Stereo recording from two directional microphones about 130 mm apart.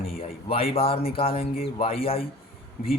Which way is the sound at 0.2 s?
50° left (ahead or behind).